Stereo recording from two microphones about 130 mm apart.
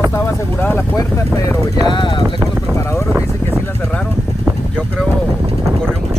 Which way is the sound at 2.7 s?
20° left (ahead or behind).